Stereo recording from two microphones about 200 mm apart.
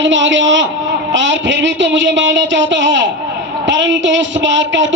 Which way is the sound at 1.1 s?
65° right (ahead or behind).